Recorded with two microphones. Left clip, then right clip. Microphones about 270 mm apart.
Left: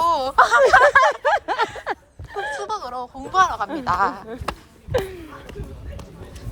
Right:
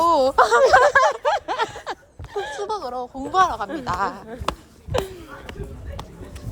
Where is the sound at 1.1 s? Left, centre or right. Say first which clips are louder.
Left 2 dB; left.